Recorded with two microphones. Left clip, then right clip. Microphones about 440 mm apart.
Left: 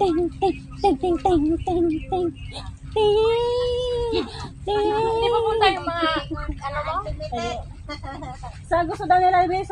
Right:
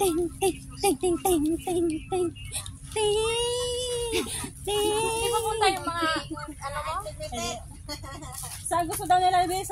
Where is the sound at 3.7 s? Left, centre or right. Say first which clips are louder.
Left 6 dB; right.